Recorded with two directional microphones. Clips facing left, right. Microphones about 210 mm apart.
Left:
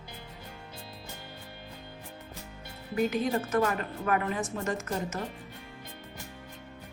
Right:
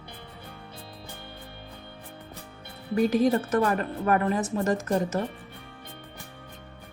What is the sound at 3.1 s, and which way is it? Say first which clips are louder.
Speech: right 5 dB; 40° right (ahead or behind).